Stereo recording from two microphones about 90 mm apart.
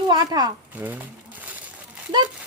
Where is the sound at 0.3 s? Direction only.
45° right (ahead or behind).